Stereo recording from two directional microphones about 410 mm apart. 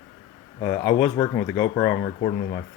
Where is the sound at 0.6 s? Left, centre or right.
Centre.